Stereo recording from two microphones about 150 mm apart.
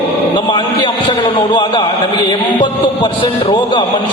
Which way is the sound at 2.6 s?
35° left (ahead or behind).